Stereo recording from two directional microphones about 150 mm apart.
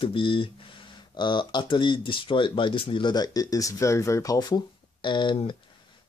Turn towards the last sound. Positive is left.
turn(degrees=30)  # may be behind; listen again after turning